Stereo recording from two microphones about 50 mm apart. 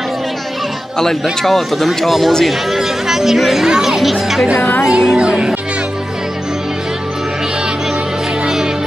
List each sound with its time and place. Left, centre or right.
1.4 s speech: centre
4.6 s speech: left
4.8 s speech: centre